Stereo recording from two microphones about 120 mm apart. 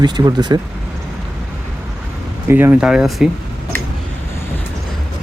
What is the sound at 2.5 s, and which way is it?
Speech, 15° right (ahead or behind).